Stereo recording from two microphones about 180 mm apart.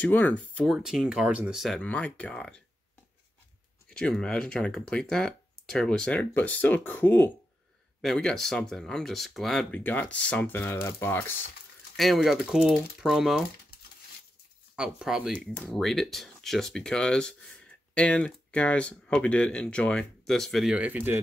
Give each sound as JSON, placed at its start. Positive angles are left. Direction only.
{"t": 0.0, "sound": "speech", "side_deg": 10}
{"t": 3.9, "sound": "speech", "side_deg": 5}
{"t": 12.0, "sound": "speech", "side_deg": 0}
{"t": 14.8, "sound": "speech", "side_deg": -5}